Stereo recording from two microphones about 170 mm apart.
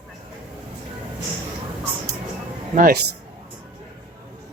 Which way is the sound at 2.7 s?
55° right (ahead or behind).